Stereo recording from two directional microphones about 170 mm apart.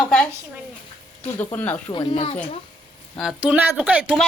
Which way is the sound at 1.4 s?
10° left (ahead or behind).